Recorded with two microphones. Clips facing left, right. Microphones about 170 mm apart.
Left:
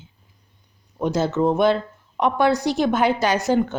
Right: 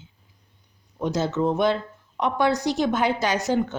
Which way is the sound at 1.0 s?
55° left (ahead or behind).